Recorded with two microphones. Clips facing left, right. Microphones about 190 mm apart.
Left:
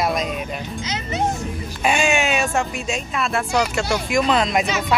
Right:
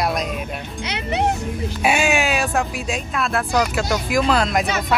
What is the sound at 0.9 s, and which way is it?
Speech, 65° right (ahead or behind).